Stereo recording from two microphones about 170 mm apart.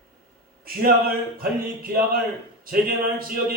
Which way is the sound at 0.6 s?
60° right (ahead or behind).